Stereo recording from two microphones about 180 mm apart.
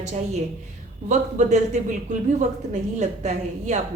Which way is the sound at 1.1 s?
40° right (ahead or behind).